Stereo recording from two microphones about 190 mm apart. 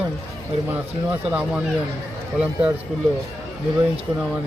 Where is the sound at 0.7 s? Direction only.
10° right (ahead or behind).